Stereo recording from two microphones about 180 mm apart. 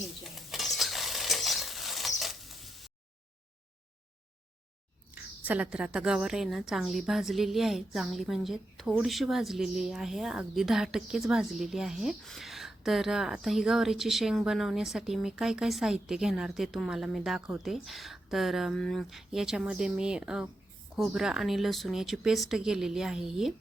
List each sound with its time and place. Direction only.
0.3 s stir: centre (ahead or behind)
5.5 s a woman's voice: 5° right (ahead or behind)